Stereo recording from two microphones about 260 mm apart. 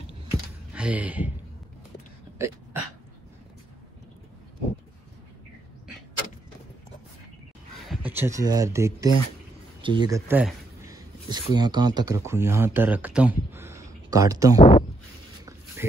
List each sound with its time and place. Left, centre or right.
0.7 s speech: centre
2.3 s throat clearing: centre
7.9 s speech: centre
14.6 s speech: left